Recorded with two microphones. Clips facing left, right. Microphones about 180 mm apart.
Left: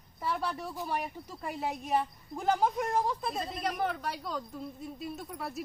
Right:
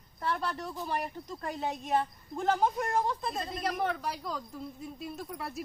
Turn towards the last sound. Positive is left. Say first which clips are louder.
# even
turn(degrees=0)  # may be behind; listen again after turning